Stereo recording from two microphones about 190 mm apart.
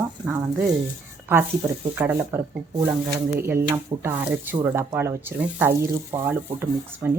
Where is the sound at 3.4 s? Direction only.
15° right (ahead or behind).